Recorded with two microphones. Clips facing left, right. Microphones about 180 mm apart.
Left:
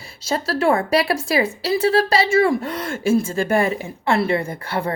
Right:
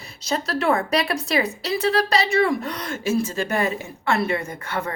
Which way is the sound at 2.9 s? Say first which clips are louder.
Left 4 dB; 50° left (ahead or behind).